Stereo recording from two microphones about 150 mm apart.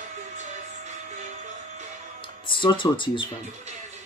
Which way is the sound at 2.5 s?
35° left (ahead or behind).